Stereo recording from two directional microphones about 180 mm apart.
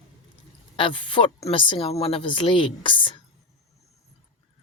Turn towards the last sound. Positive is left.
turn(degrees=25)  # may be behind; listen again after turning